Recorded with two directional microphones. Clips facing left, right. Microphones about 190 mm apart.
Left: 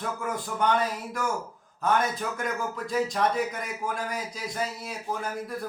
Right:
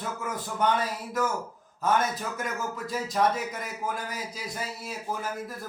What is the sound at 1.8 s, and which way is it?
Speech, 5° right (ahead or behind).